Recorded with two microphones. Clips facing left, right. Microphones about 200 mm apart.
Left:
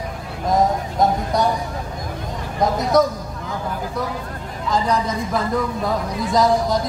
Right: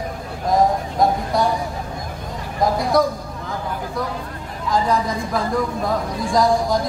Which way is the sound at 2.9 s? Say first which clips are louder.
Left 2 dB; 20° left (ahead or behind).